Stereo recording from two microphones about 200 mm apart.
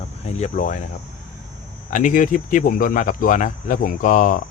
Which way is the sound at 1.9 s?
40° left (ahead or behind).